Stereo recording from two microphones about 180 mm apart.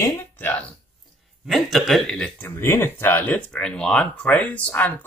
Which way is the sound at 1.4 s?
Centre (ahead or behind).